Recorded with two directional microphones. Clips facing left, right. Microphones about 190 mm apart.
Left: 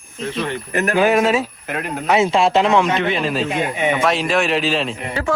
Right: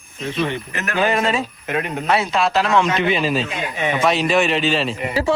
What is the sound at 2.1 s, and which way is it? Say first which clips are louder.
Speech: left 4 dB; 25° left (ahead or behind).